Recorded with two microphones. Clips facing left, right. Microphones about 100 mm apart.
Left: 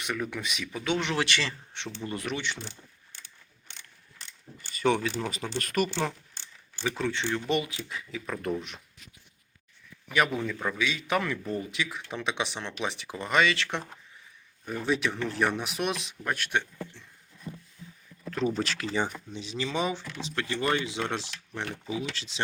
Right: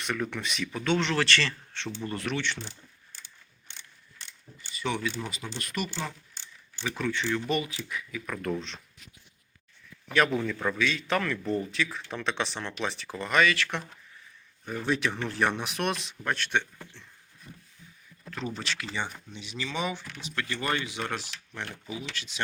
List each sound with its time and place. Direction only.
0.0 s a man's voice: 10° left (ahead or behind)
4.7 s speech: 45° left (ahead or behind)
6.8 s speech: 25° left (ahead or behind)
10.1 s a man's voice: 10° left (ahead or behind)
14.7 s speech: centre (ahead or behind)
17.5 s a sound: 40° left (ahead or behind)
18.5 s speech: 40° left (ahead or behind)